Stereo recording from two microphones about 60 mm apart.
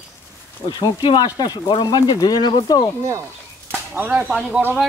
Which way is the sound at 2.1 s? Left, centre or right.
Left.